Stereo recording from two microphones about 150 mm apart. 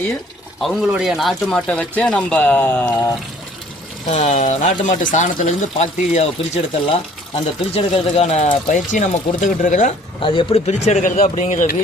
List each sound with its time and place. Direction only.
0.6 s speech: centre (ahead or behind)
4.1 s speech: 50° left (ahead or behind)
10.2 s speech: 35° left (ahead or behind); by 11.8 s 60° left (ahead or behind)